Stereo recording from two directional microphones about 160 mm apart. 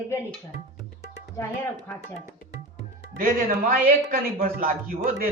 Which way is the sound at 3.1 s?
65° right (ahead or behind).